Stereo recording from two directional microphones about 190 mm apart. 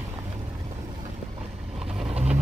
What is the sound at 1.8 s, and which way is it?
Vehicle, 5° right (ahead or behind).